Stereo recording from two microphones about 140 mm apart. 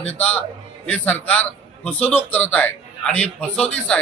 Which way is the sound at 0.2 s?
10° left (ahead or behind).